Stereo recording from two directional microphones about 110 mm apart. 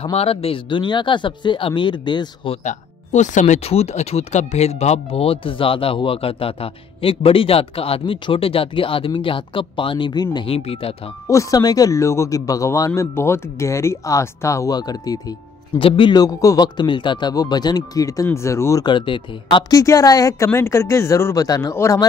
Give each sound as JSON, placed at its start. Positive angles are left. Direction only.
{"t": 0.0, "sound": "speech", "side_deg": 60}
{"t": 2.5, "sound": "speech", "side_deg": 90}
{"t": 10.4, "sound": "speech", "side_deg": 60}
{"t": 11.2, "sound": "speech", "side_deg": 30}
{"t": 15.8, "sound": "speech", "side_deg": 50}
{"t": 16.2, "sound": "speech", "side_deg": 30}
{"t": 18.9, "sound": "speech", "side_deg": 50}
{"t": 19.7, "sound": "speech", "side_deg": 30}